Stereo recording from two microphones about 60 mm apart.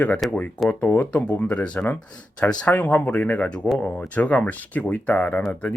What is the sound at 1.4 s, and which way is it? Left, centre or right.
Speech, left.